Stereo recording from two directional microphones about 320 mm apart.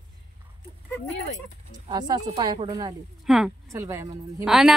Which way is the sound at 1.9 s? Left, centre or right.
Centre.